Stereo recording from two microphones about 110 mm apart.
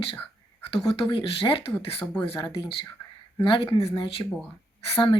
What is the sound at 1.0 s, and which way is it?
Speech, 55° left (ahead or behind).